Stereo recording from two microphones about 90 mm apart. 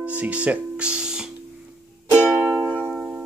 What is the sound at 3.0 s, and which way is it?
Music, 10° right (ahead or behind).